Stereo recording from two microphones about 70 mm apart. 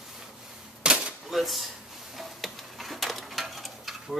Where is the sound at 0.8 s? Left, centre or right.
Centre.